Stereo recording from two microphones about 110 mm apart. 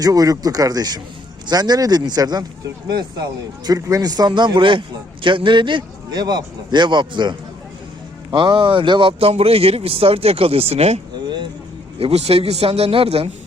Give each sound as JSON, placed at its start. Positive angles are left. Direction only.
{"t": 0.0, "sound": "a man's voice", "side_deg": -35}
{"t": 9.3, "sound": "speech", "side_deg": -65}